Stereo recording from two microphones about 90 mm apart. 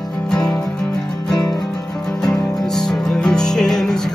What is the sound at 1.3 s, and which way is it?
Music, 45° left (ahead or behind).